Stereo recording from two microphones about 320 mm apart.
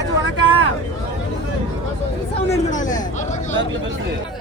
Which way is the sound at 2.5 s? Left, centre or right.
Left.